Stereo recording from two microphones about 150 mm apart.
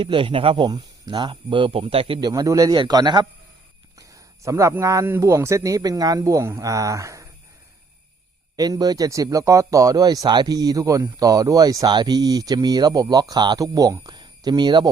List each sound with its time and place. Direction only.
0.0 s speech: 35° right (ahead or behind)
2.3 s speech: 25° right (ahead or behind)
8.5 s speech: 25° right (ahead or behind)